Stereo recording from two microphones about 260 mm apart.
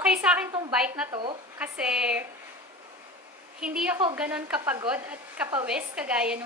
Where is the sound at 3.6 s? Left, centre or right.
Centre.